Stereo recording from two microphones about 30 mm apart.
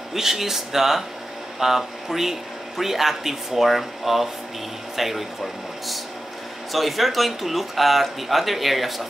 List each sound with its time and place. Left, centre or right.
0.1 s speech: centre
6.7 s speech: centre